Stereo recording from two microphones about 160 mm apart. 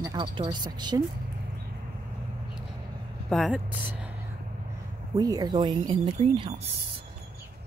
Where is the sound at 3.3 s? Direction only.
Centre (ahead or behind).